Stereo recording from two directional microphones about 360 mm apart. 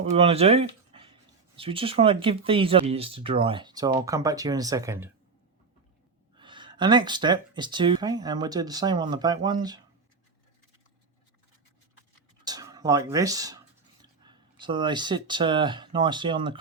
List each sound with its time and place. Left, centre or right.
0.0 s speech: centre
6.3 s speech: centre
12.5 s speech: centre